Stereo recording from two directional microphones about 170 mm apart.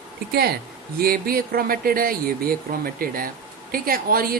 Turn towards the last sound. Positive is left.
turn(degrees=-60)  # may be behind; listen again after turning